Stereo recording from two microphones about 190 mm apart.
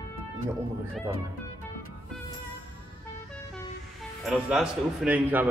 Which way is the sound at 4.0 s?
5° right (ahead or behind).